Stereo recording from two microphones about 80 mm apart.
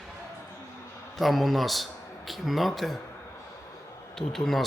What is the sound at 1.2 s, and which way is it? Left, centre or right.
A man's voice, centre.